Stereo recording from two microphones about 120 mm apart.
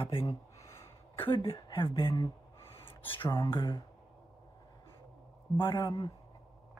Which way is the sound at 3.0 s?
45° left (ahead or behind).